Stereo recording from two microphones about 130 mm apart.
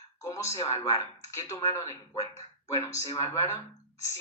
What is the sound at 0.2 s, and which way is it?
Speech, 25° left (ahead or behind).